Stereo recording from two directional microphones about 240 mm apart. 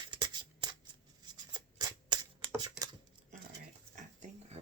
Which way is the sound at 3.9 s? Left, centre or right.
Right.